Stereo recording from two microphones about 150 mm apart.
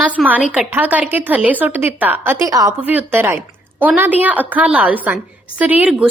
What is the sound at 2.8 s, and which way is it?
A woman's voice, 10° right (ahead or behind).